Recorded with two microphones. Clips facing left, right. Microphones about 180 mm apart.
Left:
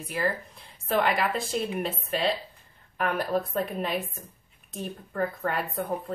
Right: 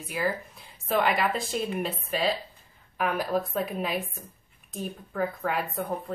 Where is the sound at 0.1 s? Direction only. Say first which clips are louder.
Even; centre (ahead or behind).